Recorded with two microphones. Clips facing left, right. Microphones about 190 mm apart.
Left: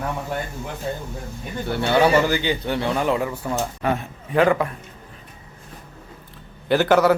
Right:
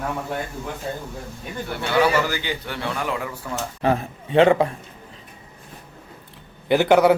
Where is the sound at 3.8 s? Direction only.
30° right (ahead or behind).